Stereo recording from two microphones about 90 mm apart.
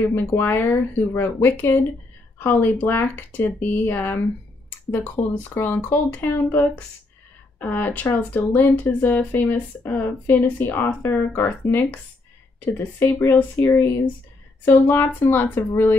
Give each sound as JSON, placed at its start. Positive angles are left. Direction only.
{"t": 0.1, "sound": "speech", "side_deg": 25}